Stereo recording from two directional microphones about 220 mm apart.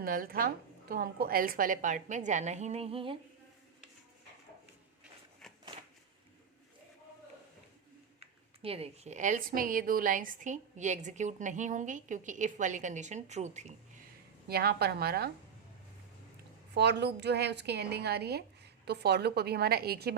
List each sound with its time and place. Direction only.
0.0 s speech: 40° right (ahead or behind); by 3.2 s 25° right (ahead or behind)
8.2 s speech: 25° right (ahead or behind)
14.4 s a woman's voice: 45° right (ahead or behind)
16.7 s a woman's voice: 50° right (ahead or behind)